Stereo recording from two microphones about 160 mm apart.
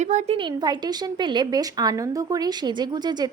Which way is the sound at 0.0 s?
45° right (ahead or behind).